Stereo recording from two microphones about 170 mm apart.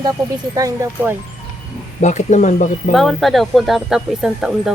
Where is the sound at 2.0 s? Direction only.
45° left (ahead or behind).